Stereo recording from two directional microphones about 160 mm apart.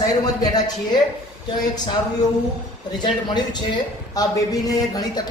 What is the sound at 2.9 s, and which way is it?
Speech, 25° left (ahead or behind).